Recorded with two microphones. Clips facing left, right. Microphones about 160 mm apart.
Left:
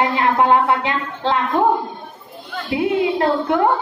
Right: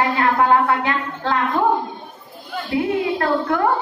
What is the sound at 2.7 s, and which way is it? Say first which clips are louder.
Speech: left 2 dB; 20° left (ahead or behind).